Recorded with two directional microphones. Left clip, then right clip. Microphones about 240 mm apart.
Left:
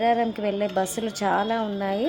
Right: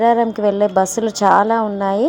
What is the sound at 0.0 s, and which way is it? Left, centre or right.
A woman's voice, centre.